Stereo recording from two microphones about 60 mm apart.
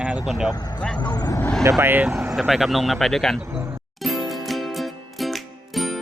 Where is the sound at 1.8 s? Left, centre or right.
Right.